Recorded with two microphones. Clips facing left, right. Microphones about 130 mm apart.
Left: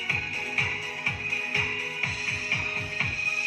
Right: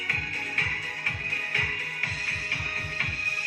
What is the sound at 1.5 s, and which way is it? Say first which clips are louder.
Music: left 2 dB; 30° left (ahead or behind).